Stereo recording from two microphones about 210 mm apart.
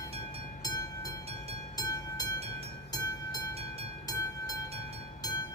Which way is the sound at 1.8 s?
15° left (ahead or behind).